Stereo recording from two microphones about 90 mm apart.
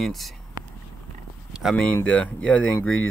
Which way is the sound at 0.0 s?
Centre (ahead or behind).